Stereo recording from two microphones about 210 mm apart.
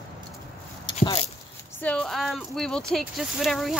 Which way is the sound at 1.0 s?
30° left (ahead or behind).